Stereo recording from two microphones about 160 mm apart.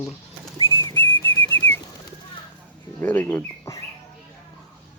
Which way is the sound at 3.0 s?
10° left (ahead or behind).